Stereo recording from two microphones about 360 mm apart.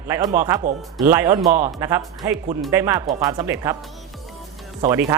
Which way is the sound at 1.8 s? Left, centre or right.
Centre.